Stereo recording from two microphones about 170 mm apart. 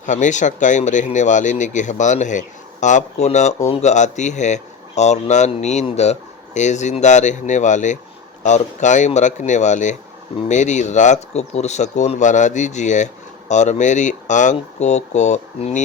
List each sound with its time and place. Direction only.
0.0 s speech: 45° left (ahead or behind)